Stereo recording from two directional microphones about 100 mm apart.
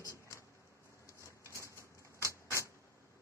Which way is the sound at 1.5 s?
30° left (ahead or behind).